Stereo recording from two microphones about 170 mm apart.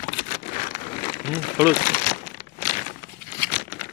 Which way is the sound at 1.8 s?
60° left (ahead or behind).